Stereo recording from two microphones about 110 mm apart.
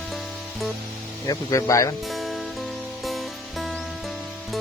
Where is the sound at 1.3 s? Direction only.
30° left (ahead or behind).